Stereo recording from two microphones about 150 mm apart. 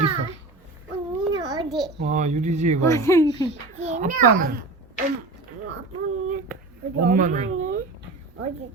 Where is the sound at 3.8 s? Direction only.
50° right (ahead or behind).